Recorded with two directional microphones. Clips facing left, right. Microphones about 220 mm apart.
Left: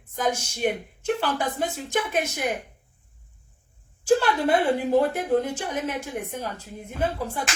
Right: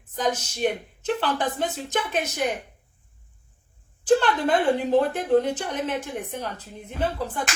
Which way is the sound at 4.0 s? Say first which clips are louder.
Right 1 dB; 10° left (ahead or behind).